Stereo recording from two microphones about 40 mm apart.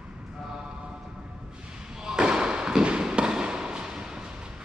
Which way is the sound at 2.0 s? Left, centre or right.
Centre.